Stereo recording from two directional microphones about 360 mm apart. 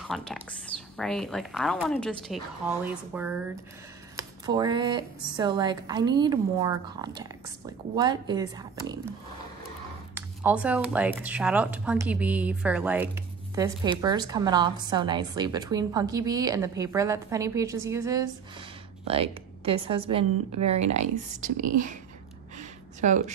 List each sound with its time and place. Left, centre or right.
0.1 s speech: centre
10.1 s speech: centre
22.6 s a sound: centre